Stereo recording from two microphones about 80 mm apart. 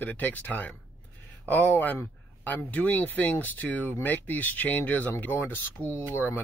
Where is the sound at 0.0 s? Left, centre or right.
Left.